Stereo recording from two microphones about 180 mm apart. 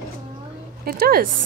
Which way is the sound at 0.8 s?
55° right (ahead or behind).